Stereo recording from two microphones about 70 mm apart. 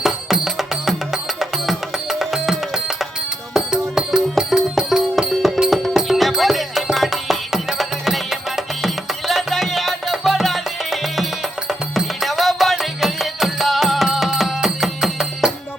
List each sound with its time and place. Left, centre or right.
0.0 s music: centre